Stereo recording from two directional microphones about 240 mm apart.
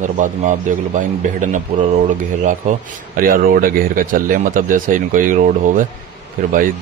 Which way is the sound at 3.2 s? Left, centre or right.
Right.